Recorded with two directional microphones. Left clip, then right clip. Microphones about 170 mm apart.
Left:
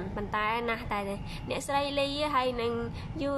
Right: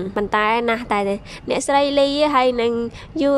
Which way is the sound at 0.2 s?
45° right (ahead or behind).